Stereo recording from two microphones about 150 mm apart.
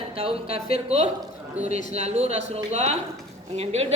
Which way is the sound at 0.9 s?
45° right (ahead or behind).